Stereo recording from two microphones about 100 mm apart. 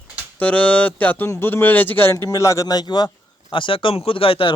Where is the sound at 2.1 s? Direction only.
30° left (ahead or behind).